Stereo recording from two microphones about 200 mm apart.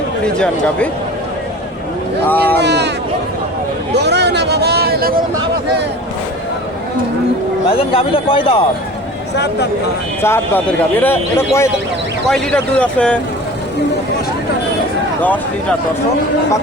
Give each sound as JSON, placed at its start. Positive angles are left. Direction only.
{"t": 0.3, "sound": "a man's voice", "side_deg": 5}
{"t": 2.3, "sound": "speech", "side_deg": 10}
{"t": 2.6, "sound": "speech", "side_deg": -60}
{"t": 3.9, "sound": "a sound", "side_deg": -55}
{"t": 7.8, "sound": "speech", "side_deg": 25}
{"t": 9.3, "sound": "speech", "side_deg": 55}
{"t": 10.2, "sound": "a man's voice", "side_deg": 10}